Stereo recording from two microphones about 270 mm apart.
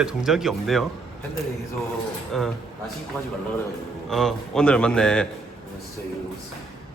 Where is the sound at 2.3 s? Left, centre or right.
Centre.